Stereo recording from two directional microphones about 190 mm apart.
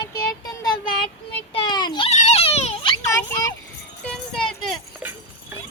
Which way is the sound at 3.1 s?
20° left (ahead or behind).